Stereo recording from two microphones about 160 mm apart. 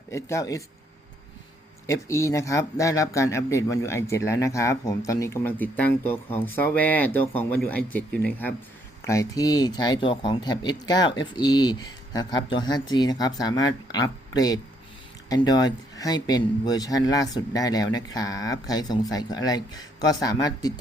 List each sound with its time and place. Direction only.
0.1 s speech: 20° left (ahead or behind)
1.9 s speech: 20° left (ahead or behind)
9.0 s speech: 20° left (ahead or behind)